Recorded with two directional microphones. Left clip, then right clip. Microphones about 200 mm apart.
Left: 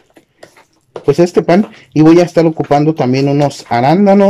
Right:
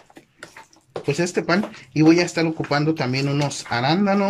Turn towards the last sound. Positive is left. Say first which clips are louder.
# left 11 dB
turn(degrees=40)  # may be behind; listen again after turning